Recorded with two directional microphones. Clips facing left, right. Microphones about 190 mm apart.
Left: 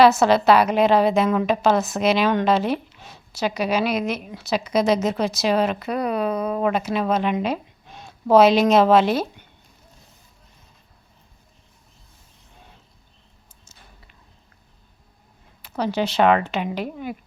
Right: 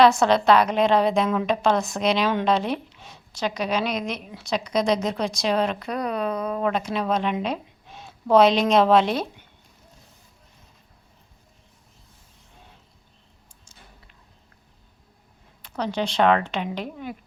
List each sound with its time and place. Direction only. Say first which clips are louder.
0.0 s a woman's voice: left 2 dB; 5° left (ahead or behind)
15.6 s speech: left 3 dB; 5° left (ahead or behind)